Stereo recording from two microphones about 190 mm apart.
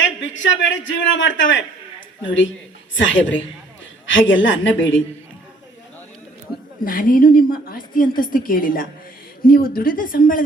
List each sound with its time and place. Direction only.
0.0 s a man's voice: 80° left
6.8 s a woman's voice: 45° left (ahead or behind)